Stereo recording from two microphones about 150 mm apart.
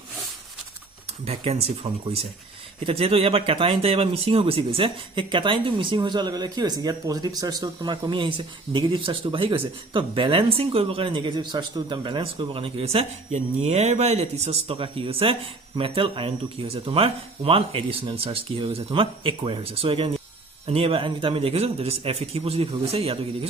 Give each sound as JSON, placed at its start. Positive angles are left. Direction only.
{"t": 1.2, "sound": "speech", "side_deg": -45}